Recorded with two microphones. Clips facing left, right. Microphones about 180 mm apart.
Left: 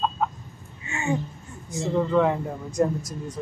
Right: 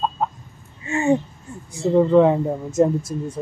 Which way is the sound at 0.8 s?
35° right (ahead or behind).